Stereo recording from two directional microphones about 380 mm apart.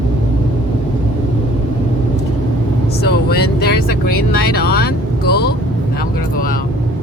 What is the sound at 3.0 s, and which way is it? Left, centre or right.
Vehicle, left.